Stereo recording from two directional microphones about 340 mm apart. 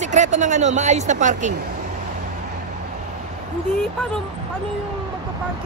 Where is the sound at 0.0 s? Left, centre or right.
Right.